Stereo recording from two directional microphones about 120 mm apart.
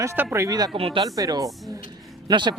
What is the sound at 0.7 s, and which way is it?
Speech, 50° right (ahead or behind).